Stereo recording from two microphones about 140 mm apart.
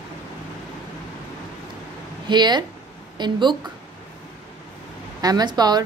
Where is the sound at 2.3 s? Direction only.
30° right (ahead or behind).